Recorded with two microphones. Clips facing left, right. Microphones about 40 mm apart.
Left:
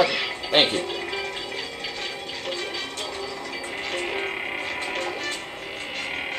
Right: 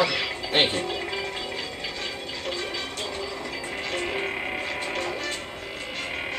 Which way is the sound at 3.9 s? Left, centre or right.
Centre.